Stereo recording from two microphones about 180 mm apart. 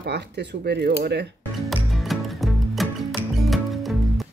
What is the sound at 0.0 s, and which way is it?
Speech, 70° right (ahead or behind).